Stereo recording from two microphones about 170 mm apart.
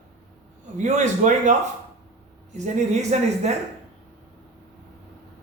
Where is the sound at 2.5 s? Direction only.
45° right (ahead or behind).